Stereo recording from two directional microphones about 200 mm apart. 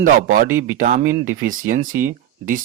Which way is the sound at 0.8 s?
40° right (ahead or behind).